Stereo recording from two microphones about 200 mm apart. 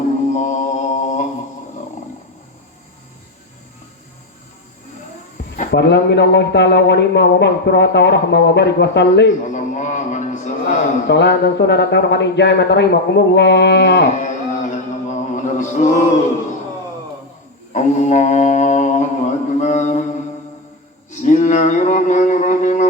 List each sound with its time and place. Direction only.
0.3 s mantra: 35° left (ahead or behind)
5.7 s a man's voice: 60° left (ahead or behind)
9.5 s a sound: 40° left (ahead or behind)
11.1 s a man's voice: 60° left (ahead or behind)
14.2 s chant: 40° left (ahead or behind)
17.7 s mantra: 35° left (ahead or behind)
21.1 s speech: 35° left (ahead or behind)